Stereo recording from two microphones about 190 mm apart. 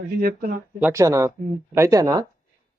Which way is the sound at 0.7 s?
10° right (ahead or behind).